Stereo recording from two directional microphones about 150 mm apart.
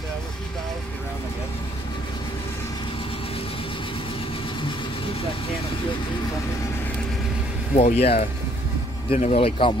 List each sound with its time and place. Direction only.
7.7 s speech: 45° left (ahead or behind)